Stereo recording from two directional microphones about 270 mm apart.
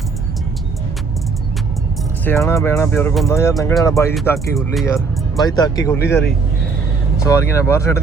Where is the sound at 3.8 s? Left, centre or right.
Centre.